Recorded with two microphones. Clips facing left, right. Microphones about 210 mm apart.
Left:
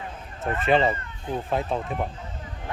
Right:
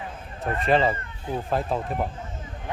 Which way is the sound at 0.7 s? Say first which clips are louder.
Even; centre (ahead or behind).